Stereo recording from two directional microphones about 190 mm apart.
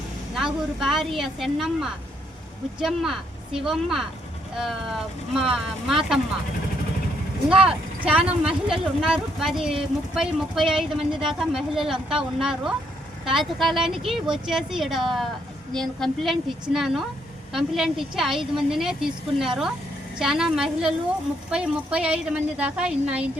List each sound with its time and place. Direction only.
0.8 s a woman's voice: centre (ahead or behind)
7.5 s a woman's voice: 5° right (ahead or behind)